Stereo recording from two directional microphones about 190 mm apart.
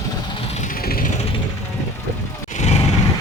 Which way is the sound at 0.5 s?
45° left (ahead or behind).